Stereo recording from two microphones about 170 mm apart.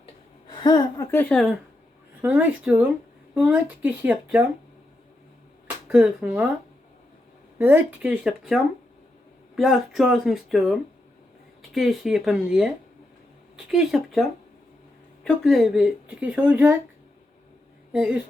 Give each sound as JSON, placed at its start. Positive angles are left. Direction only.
{"t": 0.5, "sound": "a woman's voice", "side_deg": 25}
{"t": 1.1, "sound": "speech", "side_deg": 5}
{"t": 2.2, "sound": "speech", "side_deg": -10}
{"t": 5.9, "sound": "speech", "side_deg": -5}
{"t": 7.6, "sound": "speech", "side_deg": -10}
{"t": 17.9, "sound": "speech", "side_deg": -5}